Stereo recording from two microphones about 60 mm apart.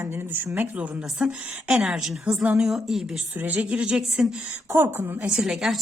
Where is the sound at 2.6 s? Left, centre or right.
Centre.